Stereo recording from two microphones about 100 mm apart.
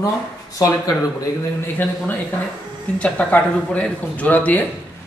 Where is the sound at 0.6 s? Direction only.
35° left (ahead or behind).